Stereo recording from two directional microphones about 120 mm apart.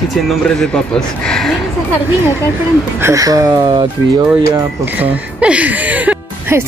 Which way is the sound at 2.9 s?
25° right (ahead or behind).